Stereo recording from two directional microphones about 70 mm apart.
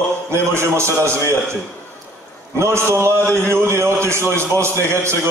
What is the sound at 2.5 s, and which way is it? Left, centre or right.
A man's voice, right.